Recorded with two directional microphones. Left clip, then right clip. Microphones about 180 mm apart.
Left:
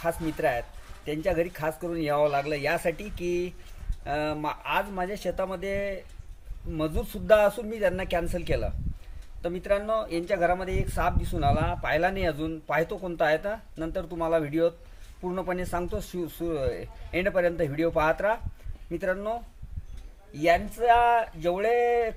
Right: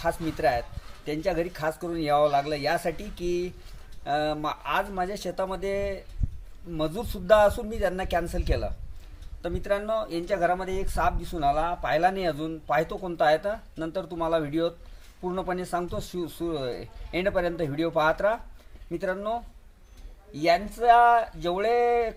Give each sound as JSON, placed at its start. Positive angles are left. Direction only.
{"t": 0.0, "sound": "speech", "side_deg": 10}